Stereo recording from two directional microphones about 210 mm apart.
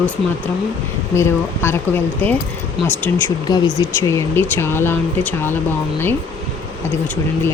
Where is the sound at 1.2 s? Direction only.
10° left (ahead or behind).